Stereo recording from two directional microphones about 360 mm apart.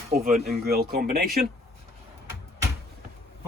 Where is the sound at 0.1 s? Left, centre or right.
Right.